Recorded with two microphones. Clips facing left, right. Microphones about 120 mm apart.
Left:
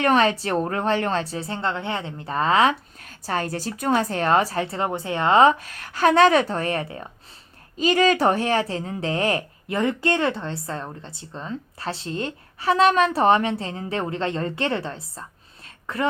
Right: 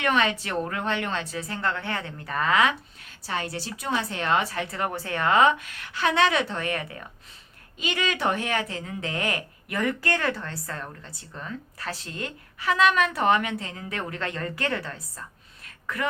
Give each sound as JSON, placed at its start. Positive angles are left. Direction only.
{"t": 0.0, "sound": "a woman's voice", "side_deg": 35}
{"t": 3.0, "sound": "a woman's voice", "side_deg": 45}
{"t": 15.6, "sound": "a sound", "side_deg": 30}